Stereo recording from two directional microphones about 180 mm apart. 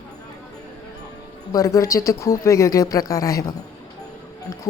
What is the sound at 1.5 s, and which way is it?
Speech, 15° left (ahead or behind).